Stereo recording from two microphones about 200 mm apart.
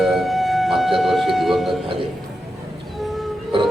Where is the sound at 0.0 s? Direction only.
Centre (ahead or behind).